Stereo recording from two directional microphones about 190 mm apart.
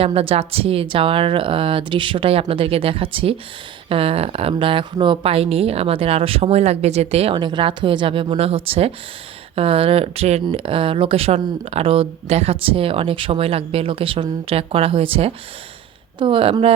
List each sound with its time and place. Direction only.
0.0 s speech: 30° right (ahead or behind)